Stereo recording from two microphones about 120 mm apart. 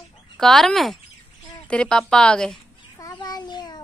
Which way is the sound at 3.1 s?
35° left (ahead or behind).